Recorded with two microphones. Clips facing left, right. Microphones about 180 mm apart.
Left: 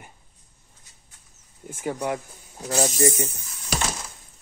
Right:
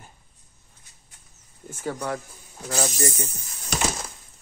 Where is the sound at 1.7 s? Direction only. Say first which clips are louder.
Left 2 dB; 15° left (ahead or behind).